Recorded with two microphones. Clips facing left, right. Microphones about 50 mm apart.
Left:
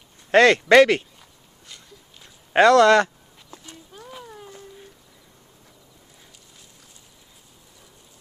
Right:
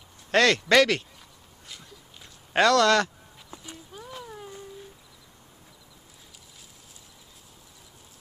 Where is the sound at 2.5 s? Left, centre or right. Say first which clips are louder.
Left 6 dB; centre.